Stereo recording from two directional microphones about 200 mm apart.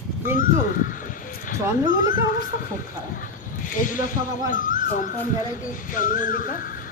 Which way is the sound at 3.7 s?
40° left (ahead or behind).